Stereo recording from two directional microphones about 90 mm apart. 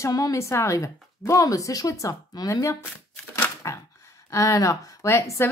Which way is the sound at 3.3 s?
30° left (ahead or behind).